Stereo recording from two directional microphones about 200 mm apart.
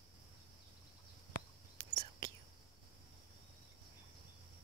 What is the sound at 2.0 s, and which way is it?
Whispering, 20° right (ahead or behind).